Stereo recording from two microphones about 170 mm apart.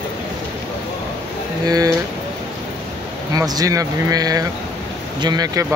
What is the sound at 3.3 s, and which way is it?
Speech, 20° right (ahead or behind).